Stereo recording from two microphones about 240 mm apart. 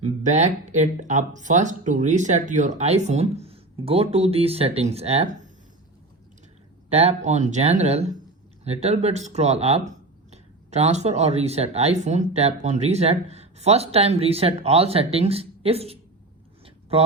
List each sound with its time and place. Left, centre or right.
0.0 s speech: right
6.9 s speech: right